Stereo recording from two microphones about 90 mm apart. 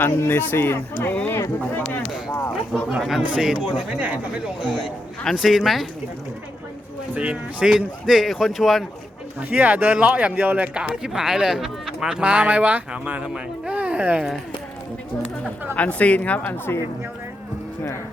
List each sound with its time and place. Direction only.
0.0 s speech: 25° left (ahead or behind)
3.0 s speech: 5° right (ahead or behind)
5.2 s speech: centre (ahead or behind)
7.1 s speech: 15° right (ahead or behind)
9.4 s speech: 15° right (ahead or behind)
15.7 s a woman's voice: 15° left (ahead or behind)